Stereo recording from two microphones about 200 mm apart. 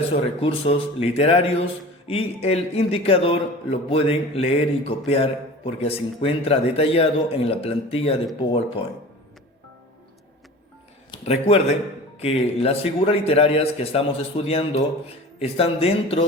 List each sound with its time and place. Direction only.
0.3 s a man's voice: 30° left (ahead or behind)
11.1 s a man's voice: 30° left (ahead or behind)